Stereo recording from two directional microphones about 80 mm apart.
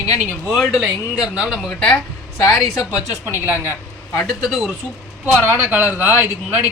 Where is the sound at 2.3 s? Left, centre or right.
Left.